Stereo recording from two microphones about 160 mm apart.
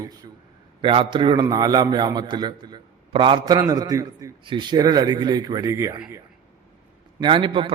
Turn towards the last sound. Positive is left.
turn(degrees=-30)  # may be behind; listen again after turning